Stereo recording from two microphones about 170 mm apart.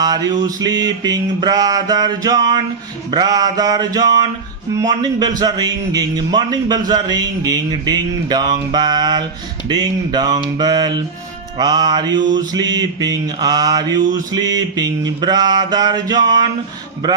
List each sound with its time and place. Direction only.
0.0 s mantra: 25° right (ahead or behind)